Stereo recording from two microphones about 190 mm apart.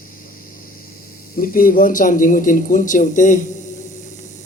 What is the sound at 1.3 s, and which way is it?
Speech, 50° left (ahead or behind).